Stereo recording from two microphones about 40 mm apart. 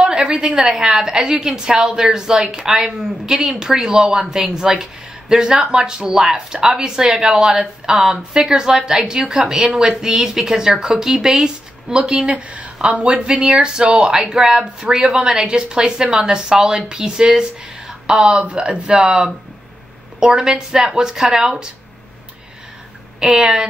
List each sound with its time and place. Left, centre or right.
0.0 s a sound: right
0.6 s a woman's voice: centre
11.4 s a woman's voice: right
20.4 s a woman's voice: centre
23.3 s a woman's voice: centre